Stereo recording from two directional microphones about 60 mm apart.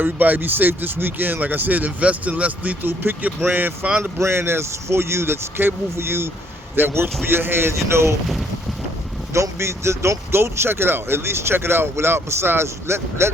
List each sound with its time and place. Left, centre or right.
0.0 s speech: right
4.2 s speech: right
8.0 s speech: centre
9.3 s speech: right